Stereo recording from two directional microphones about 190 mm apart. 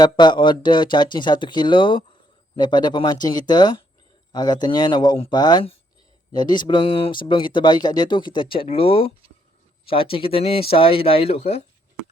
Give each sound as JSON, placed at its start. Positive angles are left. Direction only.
{"t": 0.0, "sound": "speech", "side_deg": 25}